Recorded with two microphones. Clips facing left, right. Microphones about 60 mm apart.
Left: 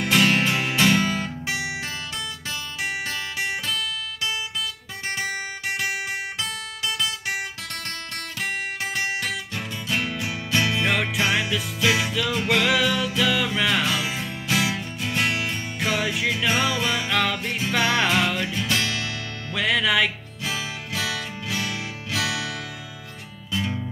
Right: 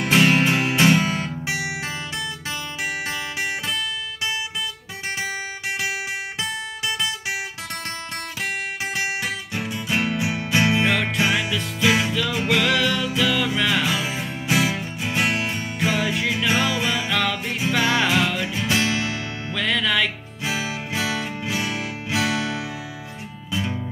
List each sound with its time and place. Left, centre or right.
0.0 s music: centre
1.4 s guitar: centre
3.1 s guitar: centre
8.9 s music: centre
10.9 s music: centre
13.8 s music: centre
15.9 s music: centre
17.4 s music: centre
18.7 s music: right
19.5 s music: centre
20.4 s music: right